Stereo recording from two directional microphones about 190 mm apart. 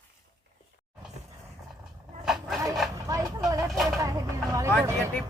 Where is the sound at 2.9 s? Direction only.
20° right (ahead or behind).